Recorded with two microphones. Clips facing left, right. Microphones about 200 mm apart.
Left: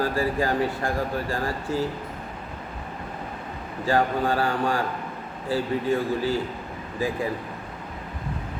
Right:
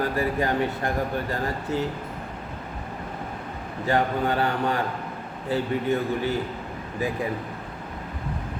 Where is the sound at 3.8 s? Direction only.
20° right (ahead or behind).